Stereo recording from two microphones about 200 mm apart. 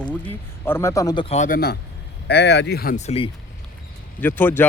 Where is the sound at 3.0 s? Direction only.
30° left (ahead or behind).